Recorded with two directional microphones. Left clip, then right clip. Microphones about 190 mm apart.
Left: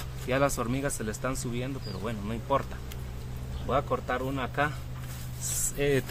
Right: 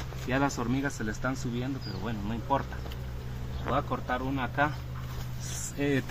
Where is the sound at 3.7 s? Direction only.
20° left (ahead or behind).